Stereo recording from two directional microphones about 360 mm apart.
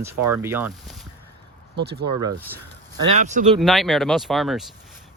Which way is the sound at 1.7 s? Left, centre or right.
Right.